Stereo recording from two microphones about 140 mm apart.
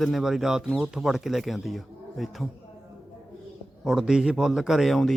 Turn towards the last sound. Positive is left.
turn(degrees=0)  # may be behind; listen again after turning